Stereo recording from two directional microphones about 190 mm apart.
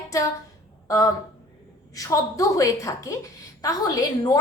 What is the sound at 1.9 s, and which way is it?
A woman's voice, 20° left (ahead or behind).